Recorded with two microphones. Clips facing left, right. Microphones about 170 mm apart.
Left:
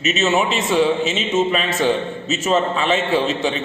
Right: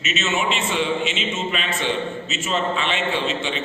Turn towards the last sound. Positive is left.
turn(degrees=40)  # may be behind; listen again after turning